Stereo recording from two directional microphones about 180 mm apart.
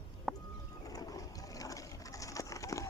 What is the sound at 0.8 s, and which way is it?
Pigeon, 20° left (ahead or behind).